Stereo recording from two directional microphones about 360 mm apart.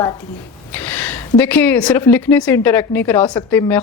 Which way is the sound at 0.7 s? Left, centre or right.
Centre.